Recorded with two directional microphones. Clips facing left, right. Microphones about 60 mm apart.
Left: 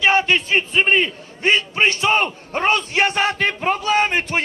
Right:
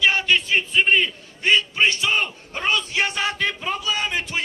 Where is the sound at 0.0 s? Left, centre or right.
Left.